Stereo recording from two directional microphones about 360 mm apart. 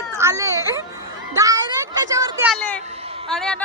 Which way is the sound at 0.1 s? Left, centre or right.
Centre.